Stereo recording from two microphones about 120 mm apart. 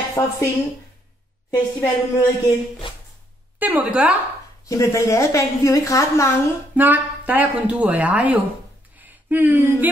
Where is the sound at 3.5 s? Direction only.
15° right (ahead or behind).